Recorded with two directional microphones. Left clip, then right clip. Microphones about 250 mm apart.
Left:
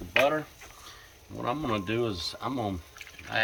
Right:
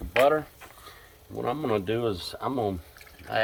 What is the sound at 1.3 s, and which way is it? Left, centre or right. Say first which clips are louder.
Speech: right 3 dB; centre.